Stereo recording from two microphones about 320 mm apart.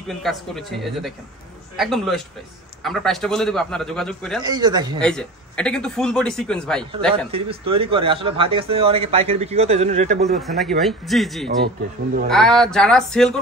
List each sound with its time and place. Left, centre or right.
0.1 s speech: centre
4.4 s speech: centre
5.0 s speech: centre
7.2 s speech: centre
10.4 s speech: centre
11.4 s speech: right
12.3 s speech: centre